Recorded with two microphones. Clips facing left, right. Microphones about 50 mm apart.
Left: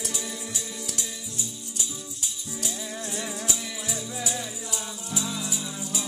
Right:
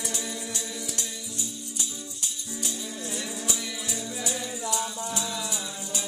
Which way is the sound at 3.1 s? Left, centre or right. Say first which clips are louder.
Left 1 dB; centre.